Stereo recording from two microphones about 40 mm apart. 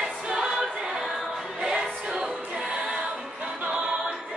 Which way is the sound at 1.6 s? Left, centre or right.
Centre.